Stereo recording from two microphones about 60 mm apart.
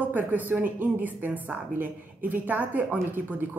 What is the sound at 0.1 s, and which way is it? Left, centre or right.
A woman's voice, right.